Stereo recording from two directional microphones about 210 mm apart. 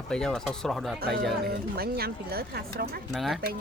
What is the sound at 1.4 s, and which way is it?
Speech, 45° right (ahead or behind).